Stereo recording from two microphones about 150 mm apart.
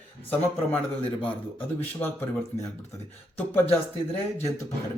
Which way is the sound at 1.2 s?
10° left (ahead or behind).